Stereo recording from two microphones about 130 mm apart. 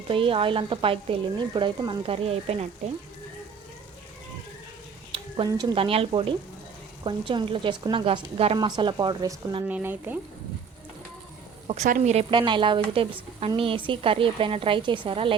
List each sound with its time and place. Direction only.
0.1 s a woman's voice: 45° right (ahead or behind)
2.1 s a woman's voice: 50° right (ahead or behind)
5.5 s a woman's voice: 35° right (ahead or behind)
5.7 s a woman's voice: 45° right (ahead or behind)
8.5 s a woman's voice: 35° right (ahead or behind)
9.6 s speech: 15° right (ahead or behind)
11.7 s speech: 75° right (ahead or behind)
12.3 s a woman's voice: 40° right (ahead or behind)